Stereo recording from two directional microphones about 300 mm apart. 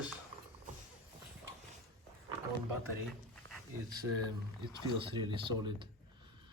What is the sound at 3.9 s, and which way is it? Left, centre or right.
Speech, centre.